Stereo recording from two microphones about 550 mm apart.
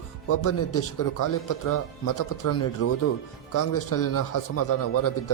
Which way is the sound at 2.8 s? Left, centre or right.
Left.